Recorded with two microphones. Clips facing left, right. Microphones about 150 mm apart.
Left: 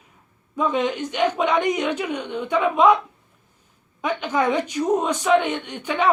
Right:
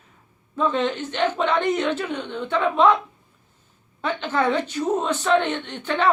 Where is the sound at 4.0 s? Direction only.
10° left (ahead or behind).